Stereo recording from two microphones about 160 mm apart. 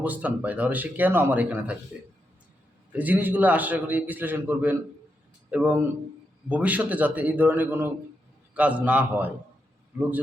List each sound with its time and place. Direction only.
0.0 s a man's voice: 10° right (ahead or behind)
2.9 s a man's voice: 10° right (ahead or behind)